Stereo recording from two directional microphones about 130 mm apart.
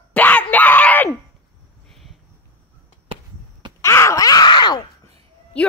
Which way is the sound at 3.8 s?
20° left (ahead or behind).